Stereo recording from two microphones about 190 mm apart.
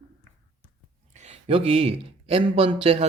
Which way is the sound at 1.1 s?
35° right (ahead or behind).